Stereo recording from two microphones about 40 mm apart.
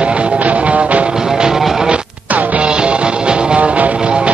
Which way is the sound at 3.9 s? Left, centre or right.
Right.